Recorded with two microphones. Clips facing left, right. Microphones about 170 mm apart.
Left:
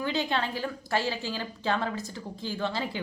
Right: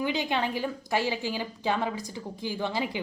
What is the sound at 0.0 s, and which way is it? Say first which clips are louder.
A woman's voice: right 1 dB; 15° right (ahead or behind).